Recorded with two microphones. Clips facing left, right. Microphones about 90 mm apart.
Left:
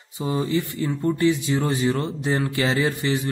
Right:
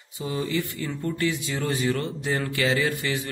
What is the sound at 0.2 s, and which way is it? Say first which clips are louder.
A man's voice: left 4 dB; 25° left (ahead or behind).